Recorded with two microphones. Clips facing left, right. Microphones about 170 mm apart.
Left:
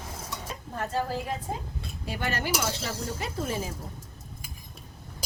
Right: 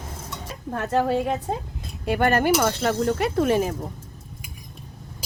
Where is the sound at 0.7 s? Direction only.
70° right (ahead or behind).